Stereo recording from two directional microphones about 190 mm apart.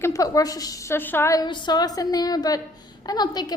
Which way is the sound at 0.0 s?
15° left (ahead or behind).